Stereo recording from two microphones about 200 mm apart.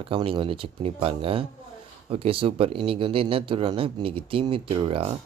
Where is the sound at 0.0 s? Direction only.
25° right (ahead or behind).